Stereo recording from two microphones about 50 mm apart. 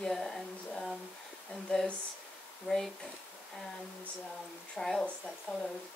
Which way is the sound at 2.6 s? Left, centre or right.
Centre.